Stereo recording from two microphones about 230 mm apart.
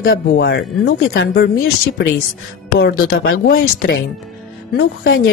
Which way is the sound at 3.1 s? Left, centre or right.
Left.